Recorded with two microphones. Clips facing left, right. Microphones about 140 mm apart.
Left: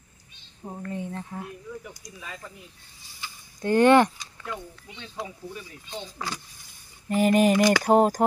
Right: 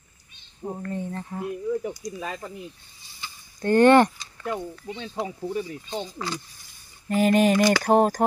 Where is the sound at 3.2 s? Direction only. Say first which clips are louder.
Right 1 dB; 5° left (ahead or behind).